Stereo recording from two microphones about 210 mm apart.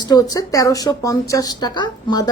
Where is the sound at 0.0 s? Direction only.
20° left (ahead or behind).